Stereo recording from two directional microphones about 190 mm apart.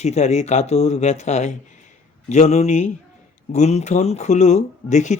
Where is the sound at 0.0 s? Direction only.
35° left (ahead or behind).